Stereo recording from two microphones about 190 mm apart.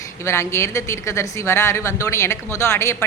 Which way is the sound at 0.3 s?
15° left (ahead or behind).